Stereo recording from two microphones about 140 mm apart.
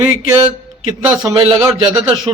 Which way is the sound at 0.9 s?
30° right (ahead or behind).